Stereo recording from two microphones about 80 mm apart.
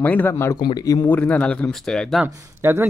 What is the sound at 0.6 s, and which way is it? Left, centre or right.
Speech, left.